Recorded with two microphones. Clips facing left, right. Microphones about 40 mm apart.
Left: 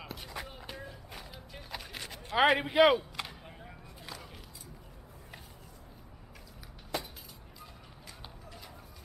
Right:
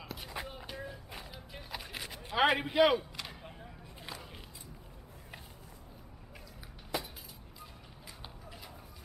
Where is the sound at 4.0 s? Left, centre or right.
Centre.